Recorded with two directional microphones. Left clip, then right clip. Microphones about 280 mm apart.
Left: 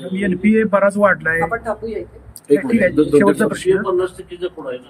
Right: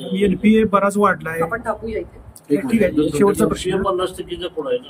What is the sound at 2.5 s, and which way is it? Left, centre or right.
Speech, left.